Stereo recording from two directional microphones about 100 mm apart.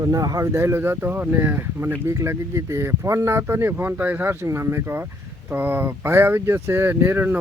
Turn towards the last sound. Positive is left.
turn(degrees=-20)  # may be behind; listen again after turning